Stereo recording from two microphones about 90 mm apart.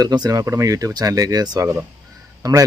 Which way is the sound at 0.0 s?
45° right (ahead or behind).